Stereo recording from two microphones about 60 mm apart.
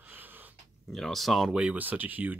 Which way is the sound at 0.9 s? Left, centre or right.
Centre.